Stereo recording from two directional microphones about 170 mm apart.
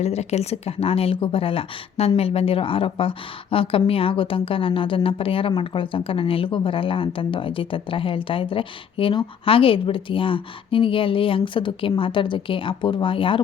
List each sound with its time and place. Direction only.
0.0 s speech: 40° left (ahead or behind)